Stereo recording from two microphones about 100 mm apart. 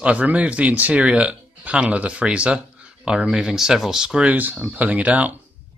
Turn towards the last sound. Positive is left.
turn(degrees=-15)  # may be behind; listen again after turning